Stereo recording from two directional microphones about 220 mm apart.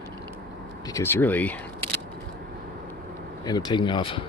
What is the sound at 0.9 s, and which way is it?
Speech, 10° left (ahead or behind).